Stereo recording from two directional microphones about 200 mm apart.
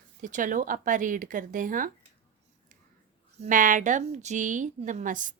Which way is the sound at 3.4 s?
40° right (ahead or behind).